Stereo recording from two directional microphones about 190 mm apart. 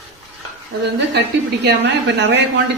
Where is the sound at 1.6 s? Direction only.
65° right (ahead or behind).